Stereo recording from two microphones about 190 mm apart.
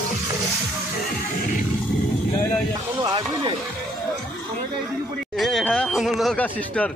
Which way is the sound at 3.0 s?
25° right (ahead or behind).